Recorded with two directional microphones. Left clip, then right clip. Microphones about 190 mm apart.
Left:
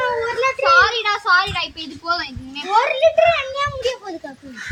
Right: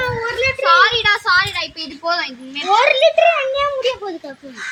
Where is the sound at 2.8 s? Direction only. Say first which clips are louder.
Right 1 dB; 40° left (ahead or behind).